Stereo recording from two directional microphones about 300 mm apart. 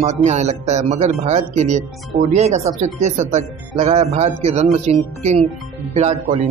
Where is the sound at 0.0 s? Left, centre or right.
Right.